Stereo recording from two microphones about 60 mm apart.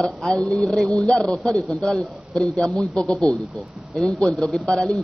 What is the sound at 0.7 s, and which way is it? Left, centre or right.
A man's voice, centre.